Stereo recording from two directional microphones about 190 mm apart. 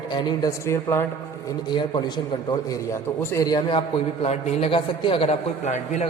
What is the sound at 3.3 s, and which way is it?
A man's voice, 20° left (ahead or behind).